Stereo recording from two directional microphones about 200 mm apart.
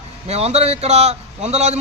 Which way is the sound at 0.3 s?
30° right (ahead or behind).